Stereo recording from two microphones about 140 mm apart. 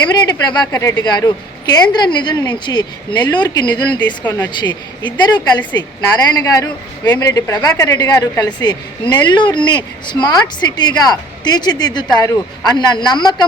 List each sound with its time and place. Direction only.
0.0 s a woman's voice: 30° left (ahead or behind)
4.2 s speech: 15° left (ahead or behind)
4.6 s a woman's voice: 30° left (ahead or behind)